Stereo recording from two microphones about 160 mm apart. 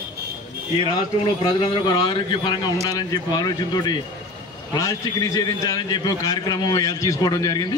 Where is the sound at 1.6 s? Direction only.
30° left (ahead or behind).